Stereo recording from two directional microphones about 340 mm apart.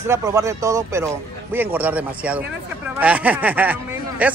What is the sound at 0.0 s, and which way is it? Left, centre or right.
Speech, centre.